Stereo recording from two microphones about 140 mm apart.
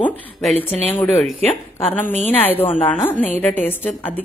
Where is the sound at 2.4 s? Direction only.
15° left (ahead or behind).